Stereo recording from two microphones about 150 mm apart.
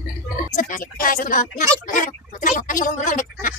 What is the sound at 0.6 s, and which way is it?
Speech, 60° left (ahead or behind).